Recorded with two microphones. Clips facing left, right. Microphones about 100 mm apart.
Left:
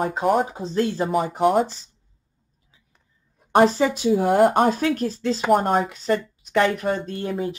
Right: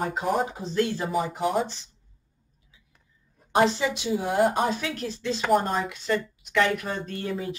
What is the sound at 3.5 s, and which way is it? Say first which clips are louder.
Speech: left 5 dB; 45° left (ahead or behind).